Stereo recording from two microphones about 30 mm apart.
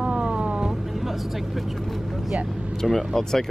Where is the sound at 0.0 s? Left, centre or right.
Right.